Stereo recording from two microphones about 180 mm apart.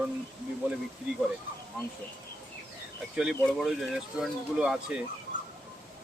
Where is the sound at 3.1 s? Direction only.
5° right (ahead or behind).